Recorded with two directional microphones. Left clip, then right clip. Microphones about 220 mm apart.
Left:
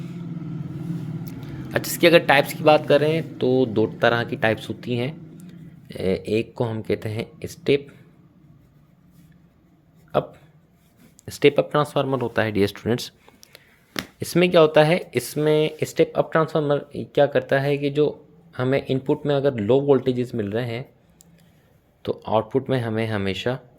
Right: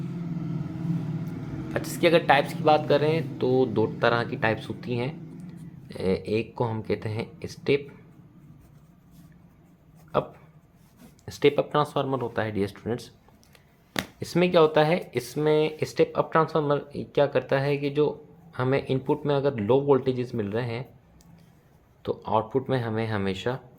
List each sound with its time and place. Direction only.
1.7 s speech: 35° left (ahead or behind)
10.1 s speech: 25° left (ahead or behind)
14.2 s speech: 25° left (ahead or behind)
22.0 s speech: 25° left (ahead or behind)